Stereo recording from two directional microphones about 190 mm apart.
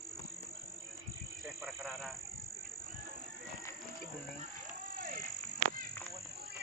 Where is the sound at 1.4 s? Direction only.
Centre (ahead or behind).